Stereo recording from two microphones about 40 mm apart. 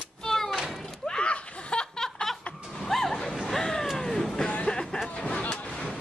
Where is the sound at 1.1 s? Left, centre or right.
Left.